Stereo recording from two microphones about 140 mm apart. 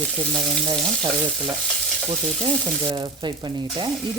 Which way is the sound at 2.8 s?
35° right (ahead or behind).